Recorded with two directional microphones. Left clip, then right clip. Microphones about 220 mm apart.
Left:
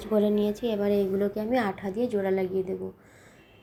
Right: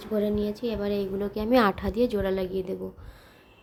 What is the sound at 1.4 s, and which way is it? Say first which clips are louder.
A woman's voice: right 5 dB; 20° right (ahead or behind).